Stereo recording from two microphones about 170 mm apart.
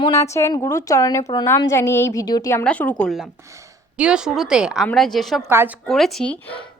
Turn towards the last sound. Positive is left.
turn(degrees=5)  # may be behind; listen again after turning